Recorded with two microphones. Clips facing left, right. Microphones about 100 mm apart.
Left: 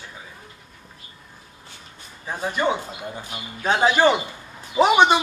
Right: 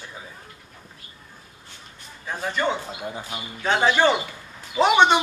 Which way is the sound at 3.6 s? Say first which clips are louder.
Left 2 dB; 15° left (ahead or behind).